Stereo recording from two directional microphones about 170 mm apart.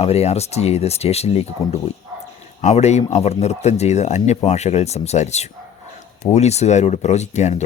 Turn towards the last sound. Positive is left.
turn(degrees=40)  # may be behind; listen again after turning